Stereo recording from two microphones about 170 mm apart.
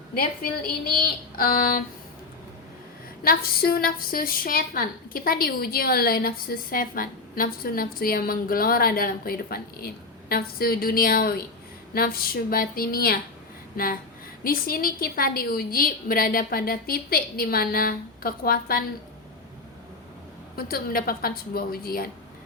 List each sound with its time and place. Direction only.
1.4 s a woman's voice: 60° left (ahead or behind)
3.2 s a woman's voice: 60° left (ahead or behind)
14.4 s a woman's voice: 60° left (ahead or behind)
20.6 s a woman's voice: 60° left (ahead or behind)